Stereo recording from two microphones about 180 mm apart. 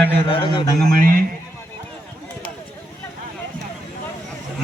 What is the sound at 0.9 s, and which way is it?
Speech, 50° right (ahead or behind).